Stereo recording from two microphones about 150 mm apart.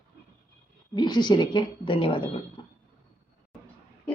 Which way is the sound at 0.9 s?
30° left (ahead or behind).